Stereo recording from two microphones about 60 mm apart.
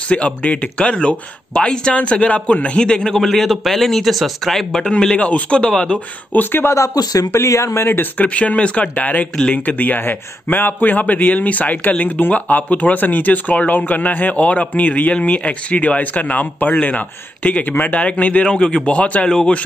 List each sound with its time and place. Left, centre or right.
0.1 s a man's voice: left
5.1 s speech: left
6.3 s speech: left
6.7 s speech: left
7.3 s speech: left
7.8 s speech: left
8.2 s speech: left